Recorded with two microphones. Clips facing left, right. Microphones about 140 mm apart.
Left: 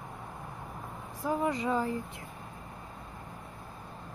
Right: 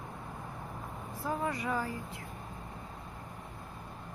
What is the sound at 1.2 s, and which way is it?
Speech, 20° left (ahead or behind).